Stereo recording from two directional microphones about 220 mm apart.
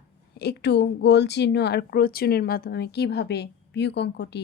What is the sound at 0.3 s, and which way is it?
Speech, 50° left (ahead or behind).